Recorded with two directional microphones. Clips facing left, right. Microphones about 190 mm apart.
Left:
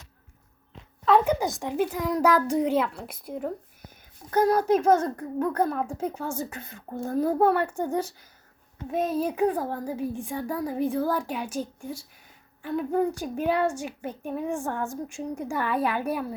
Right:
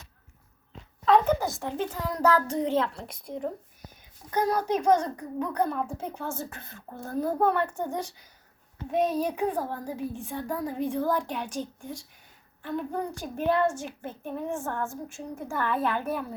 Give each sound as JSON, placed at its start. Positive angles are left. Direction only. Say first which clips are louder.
{"t": 1.0, "sound": "a woman's voice", "louder": "left 1 dB", "side_deg": 0}
{"t": 1.3, "sound": "a woman's voice", "louder": "left 1 dB", "side_deg": 15}